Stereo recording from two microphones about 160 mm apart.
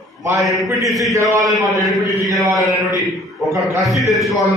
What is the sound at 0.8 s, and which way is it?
Speech, centre (ahead or behind).